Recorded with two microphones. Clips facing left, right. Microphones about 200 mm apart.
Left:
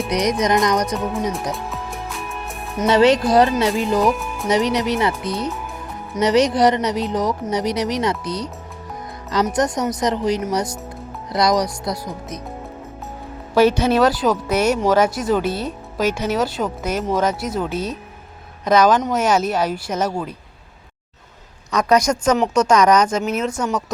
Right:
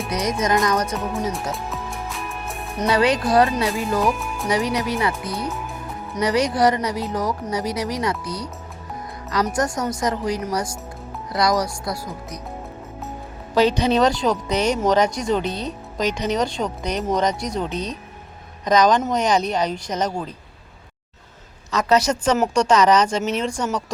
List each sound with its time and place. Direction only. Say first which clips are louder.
0.1 s speech: left 3 dB; 15° left (ahead or behind)
1.5 s music: left 1 dB; centre (ahead or behind)
2.8 s a woman's voice: left 5 dB; 25° left (ahead or behind)
4.0 s speech: left 3 dB; centre (ahead or behind)
4.4 s a woman's voice: left 4 dB; 20° left (ahead or behind)
13.6 s a woman's voice: left 3 dB; 15° right (ahead or behind)
13.9 s speech: left 2 dB; 5° left (ahead or behind)
21.7 s speech: left 2 dB; 15° left (ahead or behind)